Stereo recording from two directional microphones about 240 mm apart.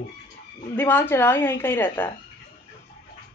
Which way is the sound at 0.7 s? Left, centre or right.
Centre.